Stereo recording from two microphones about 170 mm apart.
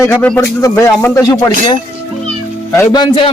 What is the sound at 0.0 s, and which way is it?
Speech, 10° left (ahead or behind).